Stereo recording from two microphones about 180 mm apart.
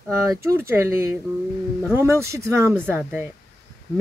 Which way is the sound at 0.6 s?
15° right (ahead or behind).